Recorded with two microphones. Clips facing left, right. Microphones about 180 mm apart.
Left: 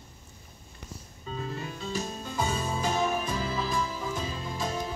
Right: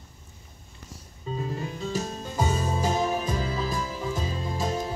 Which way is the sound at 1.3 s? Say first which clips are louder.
Right 4 dB; 15° right (ahead or behind).